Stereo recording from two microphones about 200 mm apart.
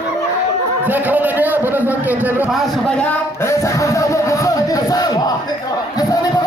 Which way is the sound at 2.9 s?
10° left (ahead or behind).